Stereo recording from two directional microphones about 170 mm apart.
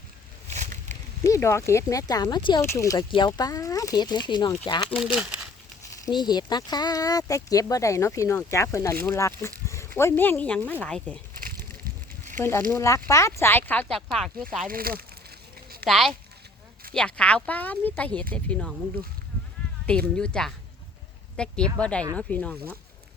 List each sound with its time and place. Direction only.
0.5 s a sound: 45° right (ahead or behind)
1.2 s speech: 15° left (ahead or behind)
6.1 s speech: 25° left (ahead or behind); by 11.2 s 5° left (ahead or behind)
12.4 s speech: 15° left (ahead or behind)
14.7 s speech: 60° right (ahead or behind)
15.9 s speech: centre (ahead or behind)
19.8 s speech: 5° left (ahead or behind)